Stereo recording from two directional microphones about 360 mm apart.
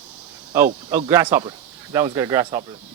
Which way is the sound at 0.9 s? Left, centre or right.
Centre.